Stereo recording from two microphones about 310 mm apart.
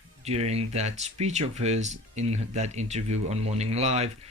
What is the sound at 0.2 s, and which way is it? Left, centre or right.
Speech, right.